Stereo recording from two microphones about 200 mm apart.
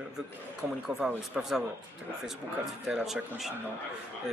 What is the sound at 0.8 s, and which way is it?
Speech, 5° right (ahead or behind).